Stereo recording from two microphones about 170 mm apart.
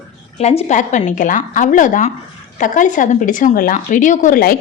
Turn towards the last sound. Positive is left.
turn(degrees=55)  # may be behind; listen again after turning